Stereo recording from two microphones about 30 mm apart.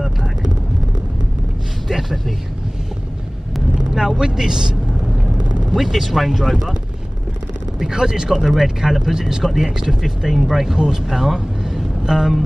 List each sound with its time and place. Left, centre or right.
1.9 s speech: centre
3.7 s speech: centre
5.8 s speech: centre
7.9 s speech: right
8.3 s speech: centre
10.3 s speech: centre
12.0 s speech: right